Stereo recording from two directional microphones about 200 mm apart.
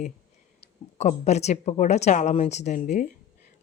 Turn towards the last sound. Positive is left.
turn(degrees=40)  # may be behind; listen again after turning